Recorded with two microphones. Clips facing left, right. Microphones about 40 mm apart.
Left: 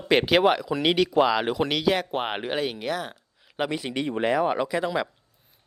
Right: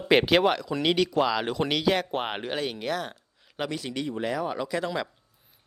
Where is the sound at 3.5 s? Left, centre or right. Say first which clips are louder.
Left 4 dB; centre.